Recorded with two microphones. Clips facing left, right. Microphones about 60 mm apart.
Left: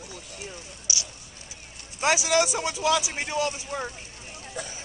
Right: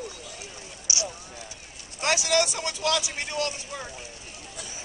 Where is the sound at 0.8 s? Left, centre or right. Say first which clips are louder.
Right 4 dB; right.